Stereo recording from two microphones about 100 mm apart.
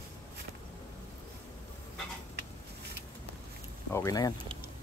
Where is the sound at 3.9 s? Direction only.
35° left (ahead or behind).